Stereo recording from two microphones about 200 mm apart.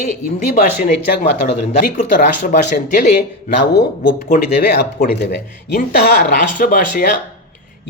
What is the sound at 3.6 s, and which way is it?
Speech, 60° left (ahead or behind).